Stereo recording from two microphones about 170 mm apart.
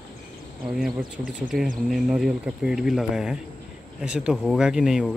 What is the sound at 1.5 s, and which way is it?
Speech, 60° right (ahead or behind).